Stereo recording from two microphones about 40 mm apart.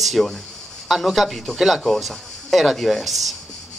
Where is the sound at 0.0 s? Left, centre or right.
Centre.